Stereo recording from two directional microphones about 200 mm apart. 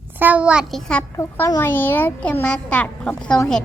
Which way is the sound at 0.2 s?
5° right (ahead or behind).